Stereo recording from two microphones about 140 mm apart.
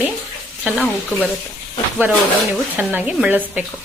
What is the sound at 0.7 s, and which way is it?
Speech, 10° left (ahead or behind).